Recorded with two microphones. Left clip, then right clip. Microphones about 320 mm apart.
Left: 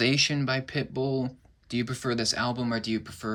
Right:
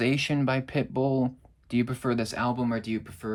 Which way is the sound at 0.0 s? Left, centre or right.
Centre.